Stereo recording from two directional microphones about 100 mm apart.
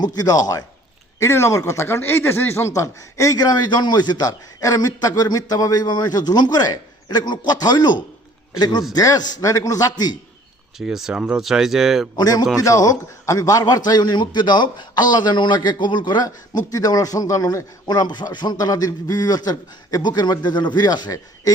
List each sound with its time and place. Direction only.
0.0 s a man's voice: 40° left (ahead or behind)
10.8 s speech: 5° right (ahead or behind)
12.1 s a man's voice: 40° left (ahead or behind)